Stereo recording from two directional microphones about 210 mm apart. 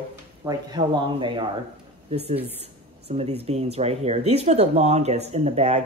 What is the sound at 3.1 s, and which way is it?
Speech, 30° right (ahead or behind).